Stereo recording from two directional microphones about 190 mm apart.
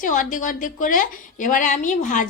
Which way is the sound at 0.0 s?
40° left (ahead or behind).